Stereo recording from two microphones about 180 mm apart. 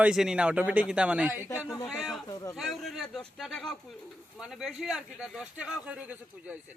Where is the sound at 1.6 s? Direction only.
15° left (ahead or behind).